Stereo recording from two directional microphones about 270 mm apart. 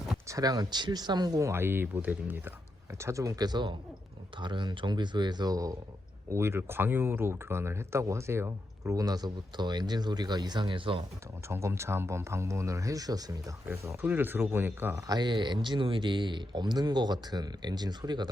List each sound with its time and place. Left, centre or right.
0.3 s speech: centre